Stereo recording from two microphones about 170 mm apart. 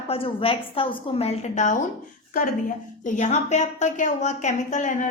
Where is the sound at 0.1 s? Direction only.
30° left (ahead or behind).